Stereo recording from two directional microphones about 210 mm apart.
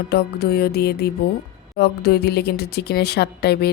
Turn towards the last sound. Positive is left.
turn(degrees=50)  # may be behind; listen again after turning